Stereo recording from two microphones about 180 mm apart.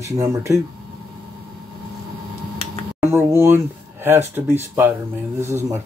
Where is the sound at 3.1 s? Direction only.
15° right (ahead or behind).